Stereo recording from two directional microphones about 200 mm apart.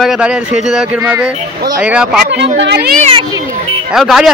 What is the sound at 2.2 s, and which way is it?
Speech, 60° right (ahead or behind).